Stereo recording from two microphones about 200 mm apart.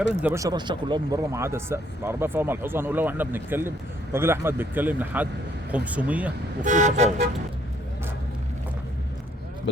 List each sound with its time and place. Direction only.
0.2 s speech: 15° right (ahead or behind)
6.6 s speech: 40° right (ahead or behind)